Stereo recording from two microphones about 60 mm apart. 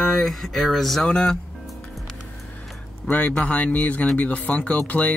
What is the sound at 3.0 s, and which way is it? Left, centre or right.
Speech, centre.